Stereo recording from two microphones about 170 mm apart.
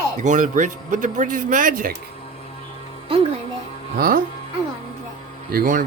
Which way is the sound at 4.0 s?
60° right (ahead or behind).